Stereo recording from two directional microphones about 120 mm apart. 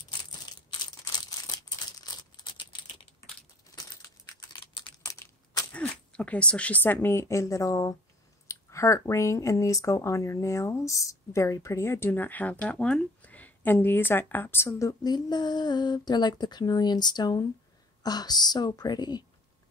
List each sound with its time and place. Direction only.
0.5 s crumpling: 35° left (ahead or behind)
4.5 s computer keyboard: 40° left (ahead or behind)
5.0 s crushing: 30° left (ahead or behind)
5.7 s speech: 10° left (ahead or behind); by 19.2 s 35° left (ahead or behind)